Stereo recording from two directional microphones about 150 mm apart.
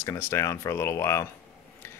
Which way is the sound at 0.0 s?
20° left (ahead or behind).